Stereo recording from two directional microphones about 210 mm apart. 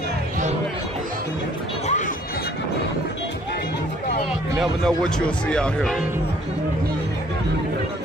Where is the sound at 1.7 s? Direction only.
30° left (ahead or behind).